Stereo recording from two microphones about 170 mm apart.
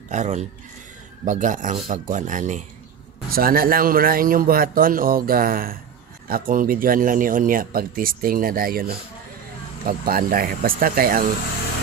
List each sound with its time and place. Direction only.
0.1 s speech: 45° right (ahead or behind)
3.3 s a man's voice: 60° right (ahead or behind)